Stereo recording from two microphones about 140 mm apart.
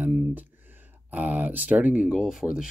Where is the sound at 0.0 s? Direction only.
10° right (ahead or behind).